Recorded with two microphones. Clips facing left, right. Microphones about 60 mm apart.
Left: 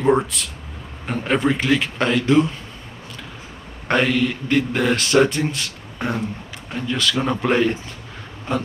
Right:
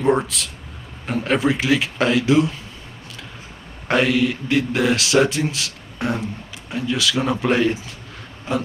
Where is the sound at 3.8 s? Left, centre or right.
Centre.